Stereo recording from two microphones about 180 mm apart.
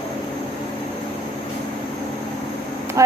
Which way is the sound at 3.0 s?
15° right (ahead or behind).